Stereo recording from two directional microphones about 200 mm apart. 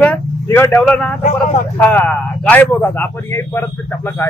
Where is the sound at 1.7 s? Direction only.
10° left (ahead or behind).